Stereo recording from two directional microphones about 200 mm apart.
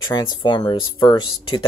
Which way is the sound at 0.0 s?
20° left (ahead or behind).